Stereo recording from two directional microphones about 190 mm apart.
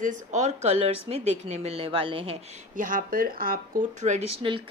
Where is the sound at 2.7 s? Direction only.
45° right (ahead or behind).